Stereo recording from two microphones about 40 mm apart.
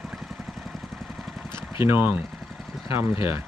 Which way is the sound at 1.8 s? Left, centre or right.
Right.